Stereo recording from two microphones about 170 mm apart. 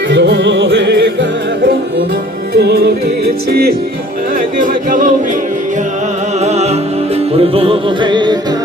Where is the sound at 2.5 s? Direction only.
70° right (ahead or behind).